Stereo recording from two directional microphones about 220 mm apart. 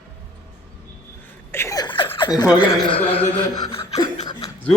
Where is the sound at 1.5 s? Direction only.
15° left (ahead or behind).